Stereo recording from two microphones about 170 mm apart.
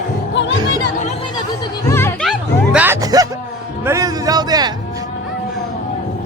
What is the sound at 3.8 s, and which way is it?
Speech, 15° right (ahead or behind).